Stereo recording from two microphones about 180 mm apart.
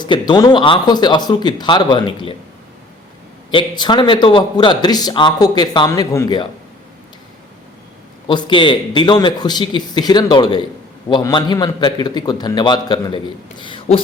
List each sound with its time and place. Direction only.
0.0 s a man's voice: 25° left (ahead or behind)
3.5 s a man's voice: 25° left (ahead or behind)
8.3 s a man's voice: 25° left (ahead or behind)